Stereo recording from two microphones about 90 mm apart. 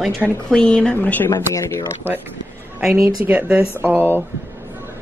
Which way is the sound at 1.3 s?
35° left (ahead or behind).